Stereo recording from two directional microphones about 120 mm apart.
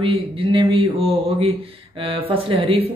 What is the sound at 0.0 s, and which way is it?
Speech, 50° right (ahead or behind).